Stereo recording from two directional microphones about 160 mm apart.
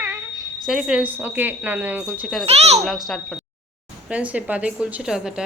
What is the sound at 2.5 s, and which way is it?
Speech, 45° right (ahead or behind).